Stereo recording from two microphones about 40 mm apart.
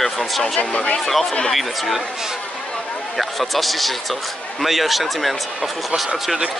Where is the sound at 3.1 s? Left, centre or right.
Centre.